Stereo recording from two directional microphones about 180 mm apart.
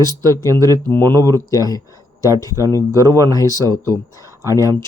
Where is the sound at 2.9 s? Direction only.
20° right (ahead or behind).